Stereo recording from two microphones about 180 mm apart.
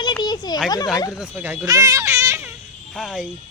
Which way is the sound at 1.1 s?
5° right (ahead or behind).